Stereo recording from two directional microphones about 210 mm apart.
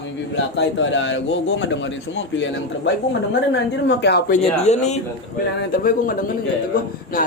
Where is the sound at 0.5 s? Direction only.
60° left (ahead or behind).